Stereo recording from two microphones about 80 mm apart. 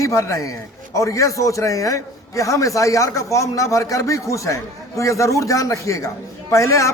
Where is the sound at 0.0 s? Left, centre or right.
Left.